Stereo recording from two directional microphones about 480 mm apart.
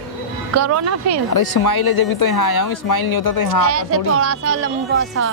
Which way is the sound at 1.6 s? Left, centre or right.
Left.